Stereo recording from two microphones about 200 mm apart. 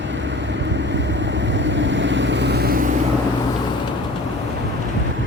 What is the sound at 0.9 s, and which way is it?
Vehicle, 65° right (ahead or behind).